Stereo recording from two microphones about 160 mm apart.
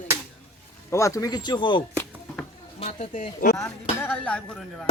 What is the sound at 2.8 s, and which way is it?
Speech, 50° left (ahead or behind).